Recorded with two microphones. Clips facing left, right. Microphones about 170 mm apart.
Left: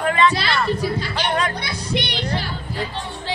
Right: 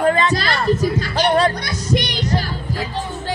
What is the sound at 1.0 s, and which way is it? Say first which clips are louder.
Music: right 6 dB; 45° right (ahead or behind).